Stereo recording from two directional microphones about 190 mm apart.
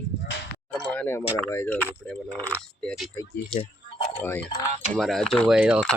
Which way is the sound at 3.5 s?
30° left (ahead or behind).